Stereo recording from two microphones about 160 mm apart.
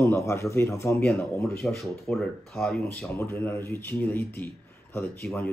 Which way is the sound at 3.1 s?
15° left (ahead or behind).